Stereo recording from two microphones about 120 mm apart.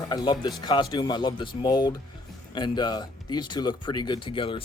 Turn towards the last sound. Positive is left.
turn(degrees=45)  # may be behind; listen again after turning